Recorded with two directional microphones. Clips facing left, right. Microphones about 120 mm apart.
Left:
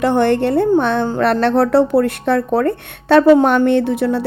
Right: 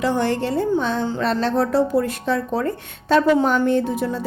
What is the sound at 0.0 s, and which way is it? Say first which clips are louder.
A woman's voice: left 6 dB; 60° left (ahead or behind).